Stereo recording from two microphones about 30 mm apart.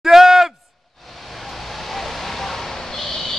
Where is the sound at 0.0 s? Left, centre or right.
Centre.